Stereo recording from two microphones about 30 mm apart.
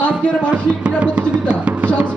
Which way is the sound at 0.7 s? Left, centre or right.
Right.